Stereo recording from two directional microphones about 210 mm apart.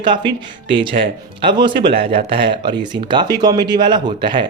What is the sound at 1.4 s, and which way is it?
Speech, 20° right (ahead or behind).